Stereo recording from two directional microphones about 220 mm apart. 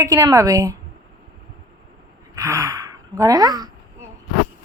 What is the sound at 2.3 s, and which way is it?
Speech, 15° right (ahead or behind).